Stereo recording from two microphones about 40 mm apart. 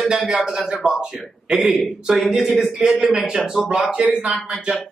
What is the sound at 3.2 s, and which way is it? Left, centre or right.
Speech, centre.